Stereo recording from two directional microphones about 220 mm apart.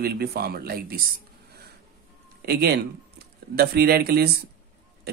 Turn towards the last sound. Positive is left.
turn(degrees=-45)  # may be behind; listen again after turning